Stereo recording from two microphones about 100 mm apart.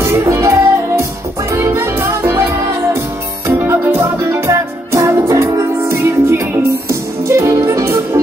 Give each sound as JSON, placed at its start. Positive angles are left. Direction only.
{"t": 0.0, "sound": "music", "side_deg": -25}